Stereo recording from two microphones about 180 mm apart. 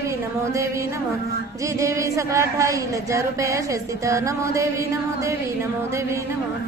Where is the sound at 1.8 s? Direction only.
15° right (ahead or behind).